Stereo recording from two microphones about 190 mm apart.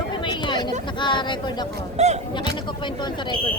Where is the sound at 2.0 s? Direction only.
35° right (ahead or behind).